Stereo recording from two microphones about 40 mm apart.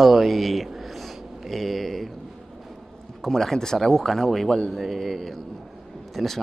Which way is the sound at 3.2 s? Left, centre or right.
Centre.